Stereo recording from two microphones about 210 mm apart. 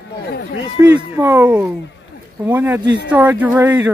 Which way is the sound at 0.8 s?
10° right (ahead or behind).